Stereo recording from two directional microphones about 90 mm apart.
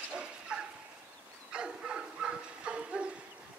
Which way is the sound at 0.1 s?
10° right (ahead or behind).